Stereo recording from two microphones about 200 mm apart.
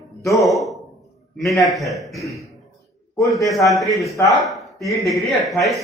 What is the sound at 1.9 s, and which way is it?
Speech, centre (ahead or behind).